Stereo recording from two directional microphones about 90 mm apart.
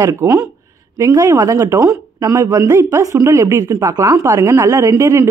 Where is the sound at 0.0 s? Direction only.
35° right (ahead or behind).